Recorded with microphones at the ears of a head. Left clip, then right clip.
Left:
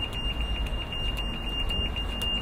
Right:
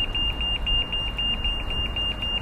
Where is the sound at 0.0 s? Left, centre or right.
Right.